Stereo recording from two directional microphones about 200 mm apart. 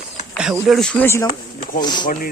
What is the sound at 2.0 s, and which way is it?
Speech, 45° left (ahead or behind).